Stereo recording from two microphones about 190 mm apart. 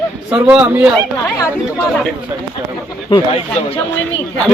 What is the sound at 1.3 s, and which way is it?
Speech, 15° left (ahead or behind).